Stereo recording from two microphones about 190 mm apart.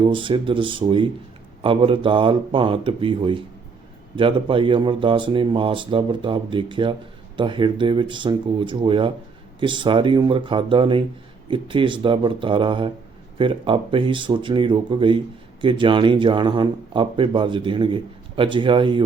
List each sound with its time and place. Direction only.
0.1 s speech: 25° right (ahead or behind)